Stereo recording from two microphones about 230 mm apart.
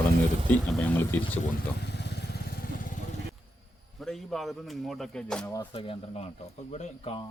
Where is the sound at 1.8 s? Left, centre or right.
Left.